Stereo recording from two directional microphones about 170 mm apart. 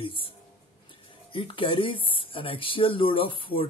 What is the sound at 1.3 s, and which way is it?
Speech, 30° left (ahead or behind).